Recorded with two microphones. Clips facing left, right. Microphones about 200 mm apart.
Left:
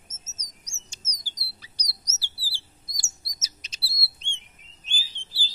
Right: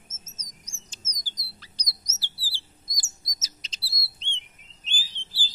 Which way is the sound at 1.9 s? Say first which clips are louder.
Right 1 dB; 15° right (ahead or behind).